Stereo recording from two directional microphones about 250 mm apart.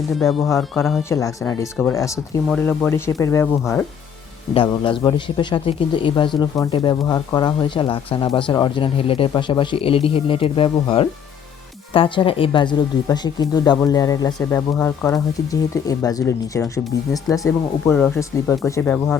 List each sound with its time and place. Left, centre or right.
0.2 s speech: centre
1.1 s speech: centre
4.5 s speech: centre